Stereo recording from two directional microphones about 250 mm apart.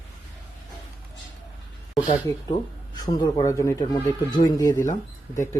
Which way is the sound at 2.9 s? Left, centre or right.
Centre.